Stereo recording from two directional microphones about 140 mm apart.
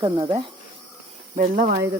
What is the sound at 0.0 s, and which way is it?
Speech, 35° right (ahead or behind).